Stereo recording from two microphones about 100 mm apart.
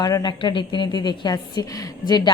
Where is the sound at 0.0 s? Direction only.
40° left (ahead or behind).